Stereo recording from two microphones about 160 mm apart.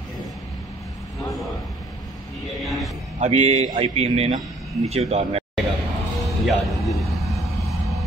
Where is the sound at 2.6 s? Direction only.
Centre (ahead or behind).